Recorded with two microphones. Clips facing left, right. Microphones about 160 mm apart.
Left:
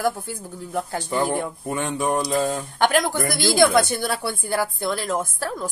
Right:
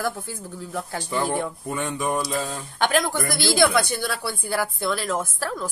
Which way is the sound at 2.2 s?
45° left (ahead or behind).